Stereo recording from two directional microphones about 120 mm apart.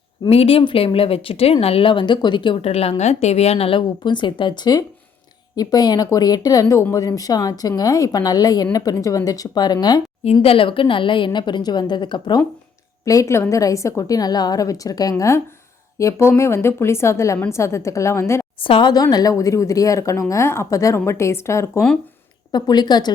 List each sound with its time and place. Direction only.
0.3 s speech: 55° left (ahead or behind)
2.6 s a woman's voice: 55° left (ahead or behind)
3.0 s a woman's voice: 65° left (ahead or behind); by 10.0 s 35° left (ahead or behind)
10.4 s a woman's voice: 50° left (ahead or behind)
13.1 s speech: 25° left (ahead or behind)
18.6 s a woman's voice: 45° left (ahead or behind); by 21.8 s 25° left (ahead or behind)
22.5 s a woman's voice: 35° left (ahead or behind)